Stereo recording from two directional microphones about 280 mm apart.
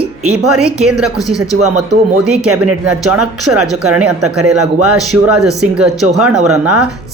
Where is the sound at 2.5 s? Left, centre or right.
Right.